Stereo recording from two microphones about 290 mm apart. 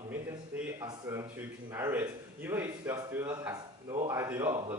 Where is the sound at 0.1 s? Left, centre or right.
Centre.